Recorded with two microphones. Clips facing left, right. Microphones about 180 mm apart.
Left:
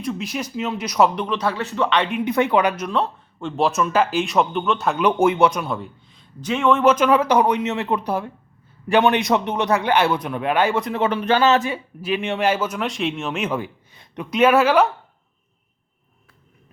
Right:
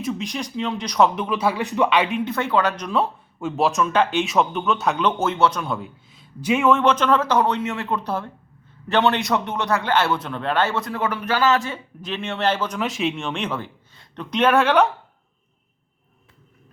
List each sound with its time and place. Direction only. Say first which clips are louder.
0.0 s speech: even; centre (ahead or behind)
2.2 s a man's voice: left 3 dB; 20° left (ahead or behind)
2.8 s speech: even; 5° right (ahead or behind)
5.0 s a man's voice: left 5 dB; 15° left (ahead or behind)
5.6 s a man's voice: left 1 dB; centre (ahead or behind)